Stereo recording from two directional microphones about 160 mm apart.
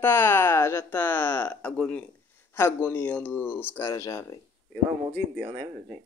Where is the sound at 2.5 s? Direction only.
15° left (ahead or behind).